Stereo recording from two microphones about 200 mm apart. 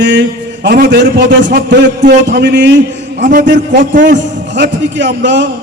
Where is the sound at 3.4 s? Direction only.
65° right (ahead or behind).